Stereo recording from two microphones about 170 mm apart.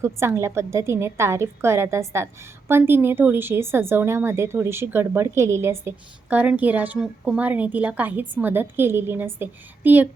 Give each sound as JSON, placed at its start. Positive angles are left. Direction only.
{"t": 0.0, "sound": "a woman's voice", "side_deg": -15}